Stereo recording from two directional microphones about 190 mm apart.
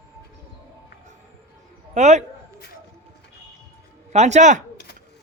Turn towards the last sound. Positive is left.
turn(degrees=-40)  # may be behind; listen again after turning